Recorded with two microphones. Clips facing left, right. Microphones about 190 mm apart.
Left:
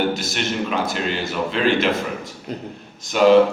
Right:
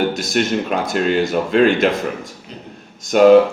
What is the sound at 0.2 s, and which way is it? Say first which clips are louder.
Speech: right 6 dB; 45° right (ahead or behind).